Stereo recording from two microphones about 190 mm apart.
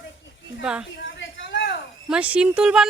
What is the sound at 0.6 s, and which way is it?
Speech, 5° right (ahead or behind).